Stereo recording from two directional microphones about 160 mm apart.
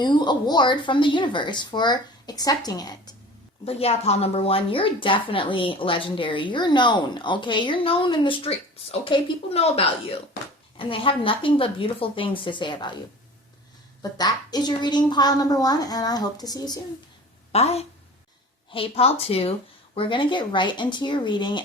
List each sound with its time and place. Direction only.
0.0 s speech: 30° left (ahead or behind)
3.7 s a woman's voice: 40° left (ahead or behind)
14.0 s speech: 25° left (ahead or behind)
17.5 s a woman's voice: 40° left (ahead or behind)